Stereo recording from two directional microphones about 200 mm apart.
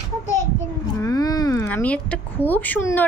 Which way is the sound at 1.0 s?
20° left (ahead or behind).